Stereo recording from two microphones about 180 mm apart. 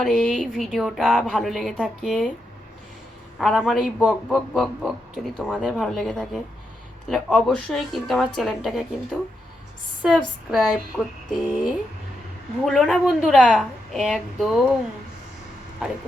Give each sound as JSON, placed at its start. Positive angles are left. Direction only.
{"t": 0.0, "sound": "speech", "side_deg": 5}
{"t": 3.3, "sound": "speech", "side_deg": 0}
{"t": 10.0, "sound": "speech", "side_deg": -5}
{"t": 15.8, "sound": "speech", "side_deg": -5}